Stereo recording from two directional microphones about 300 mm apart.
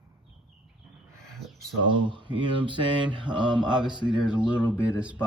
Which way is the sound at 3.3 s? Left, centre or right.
Centre.